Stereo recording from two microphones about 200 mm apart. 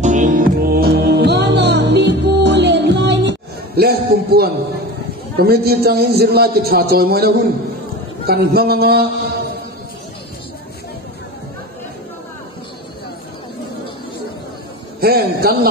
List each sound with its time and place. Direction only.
0.0 s music: 40° right (ahead or behind)
5.4 s a man's voice: 50° right (ahead or behind)
15.0 s a man's voice: 50° right (ahead or behind)